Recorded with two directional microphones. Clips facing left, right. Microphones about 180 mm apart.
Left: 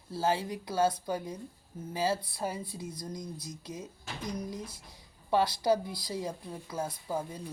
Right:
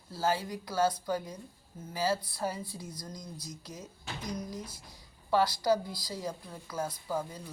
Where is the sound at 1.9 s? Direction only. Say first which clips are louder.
Even; 25° left (ahead or behind).